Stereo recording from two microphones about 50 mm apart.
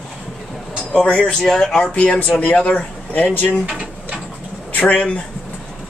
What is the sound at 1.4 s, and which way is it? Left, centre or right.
Speech, centre.